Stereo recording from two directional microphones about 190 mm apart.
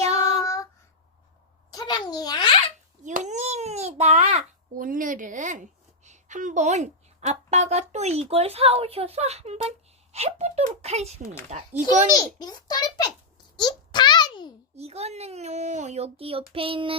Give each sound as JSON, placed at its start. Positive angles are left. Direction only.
{"t": 0.0, "sound": "child singing", "side_deg": -35}
{"t": 0.4, "sound": "child singing", "side_deg": 15}
{"t": 1.7, "sound": "a sound", "side_deg": 20}
{"t": 3.0, "sound": "babbling", "side_deg": -40}
{"t": 6.1, "sound": "a woman's voice", "side_deg": -40}
{"t": 12.1, "sound": "a child's voice", "side_deg": 20}
{"t": 13.6, "sound": "a sound", "side_deg": 25}
{"t": 14.8, "sound": "a woman's voice", "side_deg": -35}